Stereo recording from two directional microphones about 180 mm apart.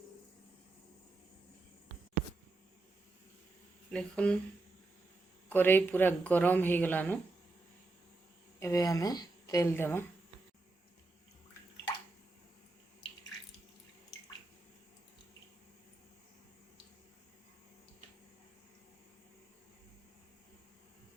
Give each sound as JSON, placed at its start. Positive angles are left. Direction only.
{"t": 3.9, "sound": "speech", "side_deg": 5}
{"t": 5.5, "sound": "speech", "side_deg": 10}
{"t": 8.5, "sound": "a woman's voice", "side_deg": 15}